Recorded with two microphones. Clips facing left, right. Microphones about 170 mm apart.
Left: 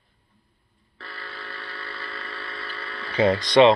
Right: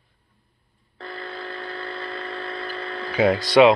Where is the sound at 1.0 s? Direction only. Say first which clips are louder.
Right 7 dB; 20° right (ahead or behind).